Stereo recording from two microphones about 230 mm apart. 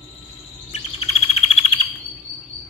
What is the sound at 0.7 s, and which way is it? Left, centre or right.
Chirp, left.